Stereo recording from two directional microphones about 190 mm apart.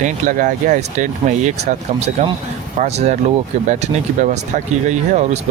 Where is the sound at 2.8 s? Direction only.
35° right (ahead or behind).